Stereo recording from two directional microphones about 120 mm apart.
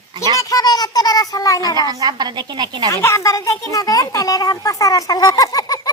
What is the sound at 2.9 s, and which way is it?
Speech, 25° left (ahead or behind).